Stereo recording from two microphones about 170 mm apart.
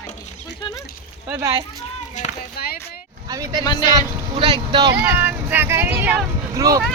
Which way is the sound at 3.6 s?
20° left (ahead or behind).